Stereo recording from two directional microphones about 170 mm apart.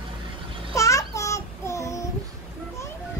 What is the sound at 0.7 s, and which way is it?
Babbling, 20° left (ahead or behind).